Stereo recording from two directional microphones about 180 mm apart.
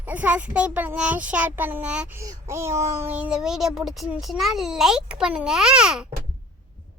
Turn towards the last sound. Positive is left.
turn(degrees=-5)  # may be behind; listen again after turning